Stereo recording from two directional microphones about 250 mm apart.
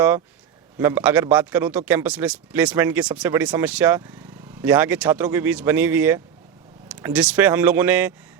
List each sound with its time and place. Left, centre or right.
0.8 s speech: centre